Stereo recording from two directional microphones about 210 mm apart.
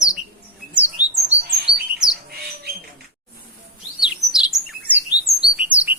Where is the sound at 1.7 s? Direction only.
5° right (ahead or behind).